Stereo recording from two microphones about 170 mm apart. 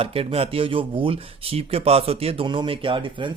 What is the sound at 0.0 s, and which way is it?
Speech, 35° right (ahead or behind).